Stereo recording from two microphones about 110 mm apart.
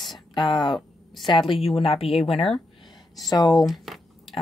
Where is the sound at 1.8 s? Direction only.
60° left (ahead or behind).